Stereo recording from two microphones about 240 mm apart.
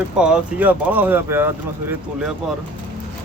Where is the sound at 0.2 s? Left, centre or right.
Centre.